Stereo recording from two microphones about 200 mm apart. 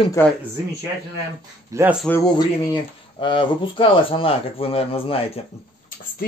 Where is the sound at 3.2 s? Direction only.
25° left (ahead or behind).